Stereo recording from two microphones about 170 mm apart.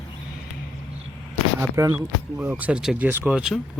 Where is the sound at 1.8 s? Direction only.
15° right (ahead or behind).